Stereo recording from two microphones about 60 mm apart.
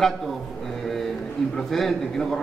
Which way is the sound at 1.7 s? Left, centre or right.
Centre.